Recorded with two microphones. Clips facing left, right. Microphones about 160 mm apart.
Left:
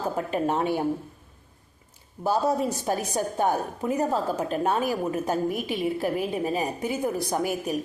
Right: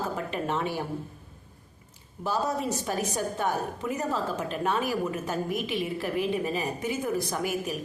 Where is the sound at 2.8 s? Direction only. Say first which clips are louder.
Left 3 dB; 35° left (ahead or behind).